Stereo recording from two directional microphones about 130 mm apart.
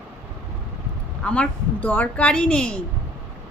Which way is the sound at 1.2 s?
10° left (ahead or behind).